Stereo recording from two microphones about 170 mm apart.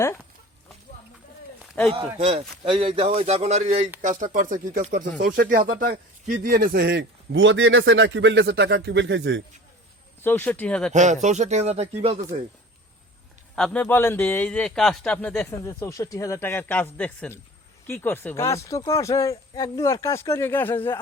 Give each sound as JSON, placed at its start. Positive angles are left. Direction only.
{"t": 1.9, "sound": "a man's voice", "side_deg": -35}
{"t": 5.0, "sound": "speech", "side_deg": -75}
{"t": 10.2, "sound": "a man's voice", "side_deg": 10}
{"t": 10.9, "sound": "a man's voice", "side_deg": -45}
{"t": 13.6, "sound": "a man's voice", "side_deg": 10}